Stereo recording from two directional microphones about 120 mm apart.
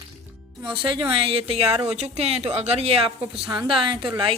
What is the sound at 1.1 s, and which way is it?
A woman's voice, 50° right (ahead or behind).